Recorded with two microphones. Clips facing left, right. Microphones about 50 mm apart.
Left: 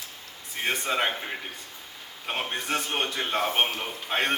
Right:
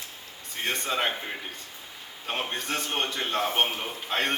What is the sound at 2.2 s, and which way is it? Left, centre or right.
A man's voice, centre.